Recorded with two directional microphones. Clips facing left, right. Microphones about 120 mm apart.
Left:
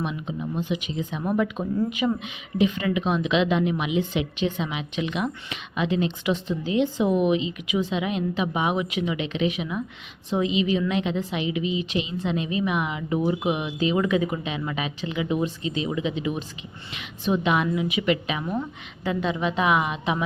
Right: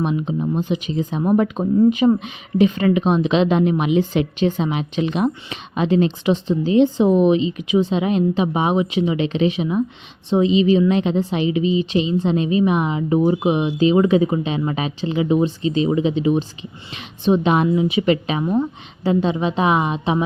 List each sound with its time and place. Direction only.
0.0 s speech: 35° right (ahead or behind)